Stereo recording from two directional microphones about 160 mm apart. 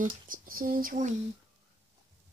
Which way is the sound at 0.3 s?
65° right (ahead or behind).